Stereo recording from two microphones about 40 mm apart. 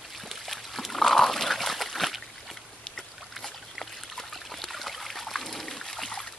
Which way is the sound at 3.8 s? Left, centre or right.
Centre.